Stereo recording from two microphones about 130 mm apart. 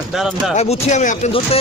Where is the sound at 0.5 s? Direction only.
55° left (ahead or behind).